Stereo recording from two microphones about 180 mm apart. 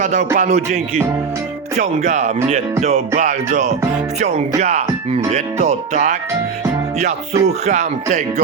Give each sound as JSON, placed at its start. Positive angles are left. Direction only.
{"t": 0.0, "sound": "music", "side_deg": -40}